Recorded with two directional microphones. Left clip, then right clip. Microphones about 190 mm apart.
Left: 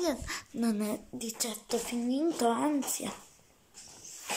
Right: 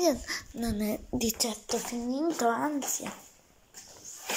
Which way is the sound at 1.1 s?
20° right (ahead or behind).